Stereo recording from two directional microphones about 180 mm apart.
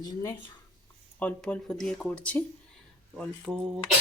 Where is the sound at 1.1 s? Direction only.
10° left (ahead or behind).